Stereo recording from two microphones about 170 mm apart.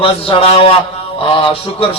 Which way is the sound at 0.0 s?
35° left (ahead or behind).